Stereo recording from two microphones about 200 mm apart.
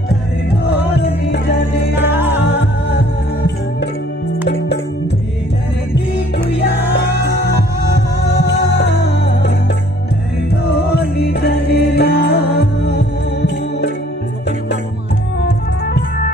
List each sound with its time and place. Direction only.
1.0 s music: 60° left (ahead or behind)
2.0 s music: 10° right (ahead or behind)
2.4 s music: 60° left (ahead or behind)
11.1 s music: 55° left (ahead or behind)
15.4 s music: 55° left (ahead or behind)